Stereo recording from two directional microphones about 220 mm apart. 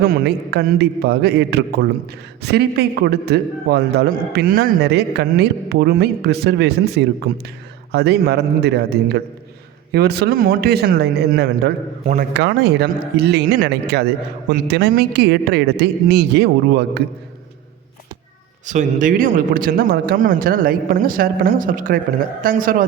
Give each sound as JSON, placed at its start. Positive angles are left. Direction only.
{"t": 0.0, "sound": "a man's voice", "side_deg": -45}
{"t": 18.6, "sound": "a man's voice", "side_deg": -35}